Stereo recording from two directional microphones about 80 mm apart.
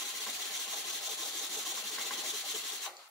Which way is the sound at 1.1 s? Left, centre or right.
Centre.